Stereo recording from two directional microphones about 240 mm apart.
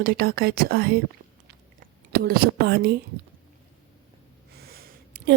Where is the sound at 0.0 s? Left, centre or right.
Right.